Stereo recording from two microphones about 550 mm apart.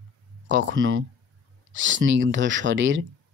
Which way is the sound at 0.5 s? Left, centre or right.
Centre.